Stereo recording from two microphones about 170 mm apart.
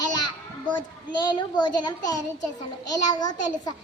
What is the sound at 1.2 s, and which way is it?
A child's voice, 25° left (ahead or behind).